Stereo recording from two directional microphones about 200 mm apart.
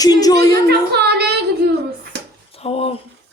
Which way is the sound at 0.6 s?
55° right (ahead or behind).